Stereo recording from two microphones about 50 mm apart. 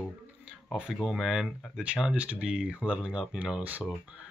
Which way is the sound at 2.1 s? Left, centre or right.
Right.